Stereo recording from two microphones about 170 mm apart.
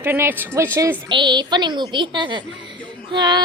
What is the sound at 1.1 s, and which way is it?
A woman's voice, 25° right (ahead or behind).